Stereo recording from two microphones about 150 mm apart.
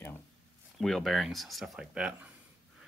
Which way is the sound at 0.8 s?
Centre (ahead or behind).